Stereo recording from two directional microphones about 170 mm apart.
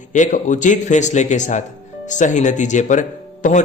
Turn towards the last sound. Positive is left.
turn(degrees=45)  # may be behind; listen again after turning